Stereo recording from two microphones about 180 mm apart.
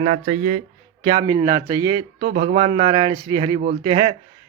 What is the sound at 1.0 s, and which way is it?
Speech, 25° right (ahead or behind).